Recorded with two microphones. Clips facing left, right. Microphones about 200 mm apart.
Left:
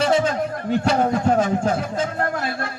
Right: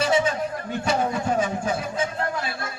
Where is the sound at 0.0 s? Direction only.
60° left (ahead or behind).